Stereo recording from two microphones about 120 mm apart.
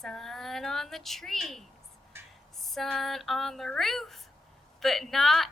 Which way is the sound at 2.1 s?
20° right (ahead or behind).